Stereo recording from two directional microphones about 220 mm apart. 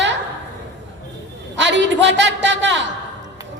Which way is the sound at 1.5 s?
55° right (ahead or behind).